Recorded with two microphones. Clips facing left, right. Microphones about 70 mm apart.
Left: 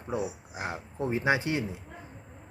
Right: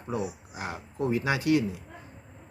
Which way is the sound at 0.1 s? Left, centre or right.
Left.